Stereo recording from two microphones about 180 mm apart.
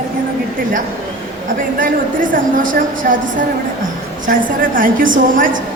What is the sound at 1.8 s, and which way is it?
A woman's voice, 50° right (ahead or behind).